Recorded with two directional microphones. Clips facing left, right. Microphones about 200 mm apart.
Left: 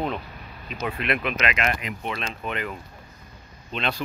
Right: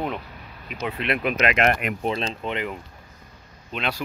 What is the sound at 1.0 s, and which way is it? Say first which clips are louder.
Speech: right 4 dB; 35° right (ahead or behind).